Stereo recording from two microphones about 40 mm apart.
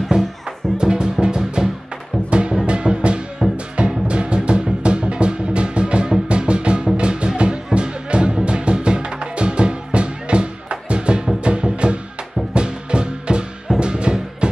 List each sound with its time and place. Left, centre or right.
0.7 s music: centre
3.4 s music: centre
3.7 s music: right